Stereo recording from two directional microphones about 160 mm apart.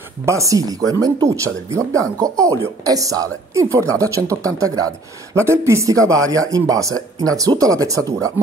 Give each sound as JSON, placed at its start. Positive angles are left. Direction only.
{"t": 0.2, "sound": "speech", "side_deg": -20}